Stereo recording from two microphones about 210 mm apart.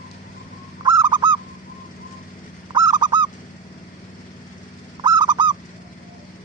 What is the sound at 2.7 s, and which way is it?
Honk, 20° right (ahead or behind).